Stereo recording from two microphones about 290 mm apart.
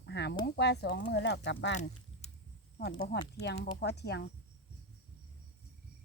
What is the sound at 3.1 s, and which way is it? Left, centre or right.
Speech, left.